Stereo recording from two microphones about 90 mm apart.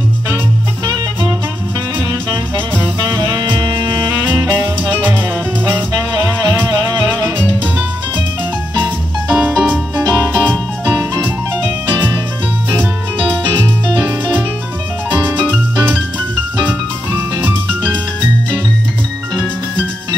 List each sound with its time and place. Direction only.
3.2 s music: 45° right (ahead or behind)
4.3 s music: 20° right (ahead or behind)
6.2 s music: 40° right (ahead or behind)
8.8 s music: 20° right (ahead or behind)
14.0 s music: 15° right (ahead or behind)